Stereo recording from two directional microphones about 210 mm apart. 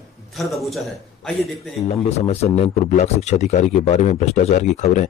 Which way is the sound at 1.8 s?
30° left (ahead or behind).